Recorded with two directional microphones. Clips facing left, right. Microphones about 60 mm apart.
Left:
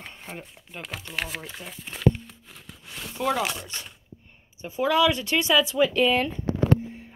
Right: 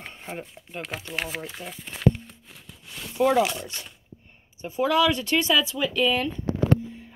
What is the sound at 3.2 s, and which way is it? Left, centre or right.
Speech, centre.